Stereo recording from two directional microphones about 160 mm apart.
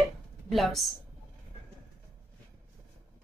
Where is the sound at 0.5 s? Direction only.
Centre (ahead or behind).